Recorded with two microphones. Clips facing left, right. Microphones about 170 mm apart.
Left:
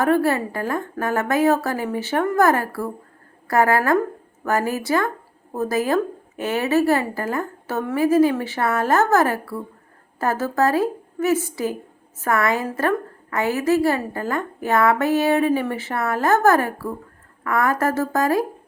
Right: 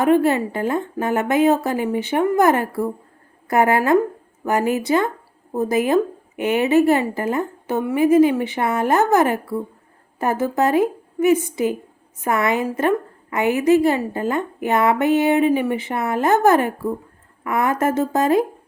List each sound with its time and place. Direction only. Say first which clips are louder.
0.0 s a woman's voice: right 3 dB; 20° right (ahead or behind)